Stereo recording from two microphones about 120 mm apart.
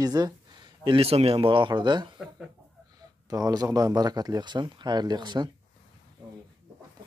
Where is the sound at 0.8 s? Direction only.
50° right (ahead or behind).